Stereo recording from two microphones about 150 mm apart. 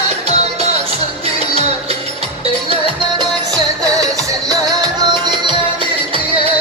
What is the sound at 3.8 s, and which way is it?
Music, 25° right (ahead or behind).